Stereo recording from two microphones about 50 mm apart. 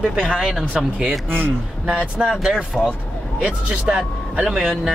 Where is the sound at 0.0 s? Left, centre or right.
Centre.